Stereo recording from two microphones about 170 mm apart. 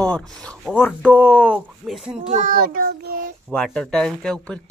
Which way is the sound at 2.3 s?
50° right (ahead or behind).